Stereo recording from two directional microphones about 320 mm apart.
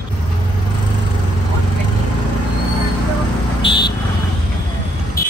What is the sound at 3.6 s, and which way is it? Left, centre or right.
Vehicle, centre.